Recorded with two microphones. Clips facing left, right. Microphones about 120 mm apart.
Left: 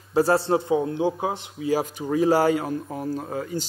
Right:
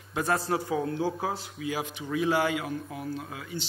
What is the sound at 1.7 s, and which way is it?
A man's voice, 40° left (ahead or behind).